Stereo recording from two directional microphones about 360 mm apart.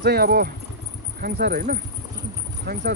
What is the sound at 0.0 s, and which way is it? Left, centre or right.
Speech, right.